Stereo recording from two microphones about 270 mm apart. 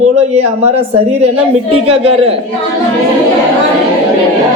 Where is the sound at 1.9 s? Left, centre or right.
Right.